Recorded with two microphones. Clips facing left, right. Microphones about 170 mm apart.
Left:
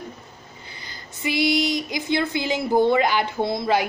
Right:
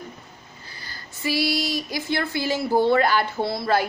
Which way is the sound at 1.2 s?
20° left (ahead or behind).